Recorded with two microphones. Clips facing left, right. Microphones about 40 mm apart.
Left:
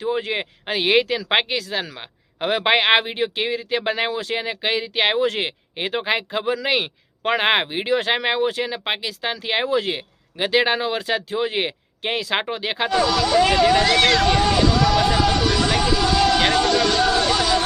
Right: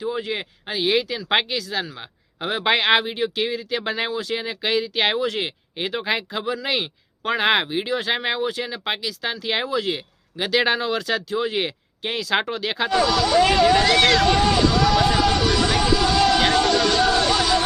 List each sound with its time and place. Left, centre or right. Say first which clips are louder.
0.0 s speech: left 3 dB; left
1.3 s a man's voice: left 1 dB; left
2.6 s speech: left 1 dB; left
12.9 s vehicle: even; centre